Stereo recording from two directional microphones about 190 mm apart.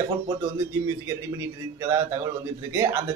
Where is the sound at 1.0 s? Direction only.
15° right (ahead or behind).